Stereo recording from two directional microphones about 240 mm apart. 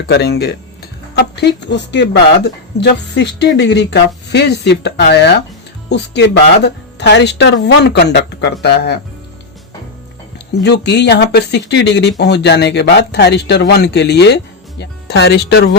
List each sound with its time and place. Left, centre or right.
0.1 s speech: left
10.3 s speech: left